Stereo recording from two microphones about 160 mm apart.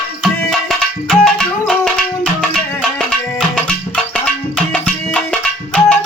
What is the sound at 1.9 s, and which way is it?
Music, 5° left (ahead or behind).